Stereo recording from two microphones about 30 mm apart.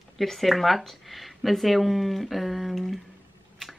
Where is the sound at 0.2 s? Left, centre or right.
Centre.